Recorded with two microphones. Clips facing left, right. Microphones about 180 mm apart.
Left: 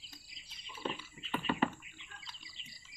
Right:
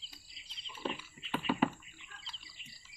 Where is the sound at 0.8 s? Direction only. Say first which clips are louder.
Right 1 dB; 5° right (ahead or behind).